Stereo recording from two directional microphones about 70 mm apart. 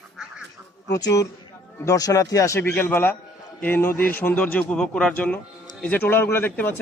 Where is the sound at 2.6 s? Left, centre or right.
Left.